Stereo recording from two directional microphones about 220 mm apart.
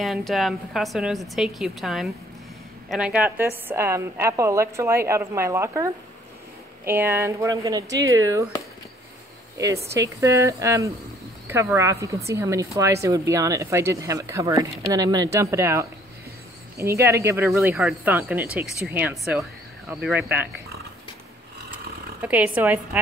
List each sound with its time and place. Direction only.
0.0 s a woman's voice: centre (ahead or behind)
9.9 s a woman's voice: 15° right (ahead or behind)
22.2 s a woman's voice: 5° right (ahead or behind)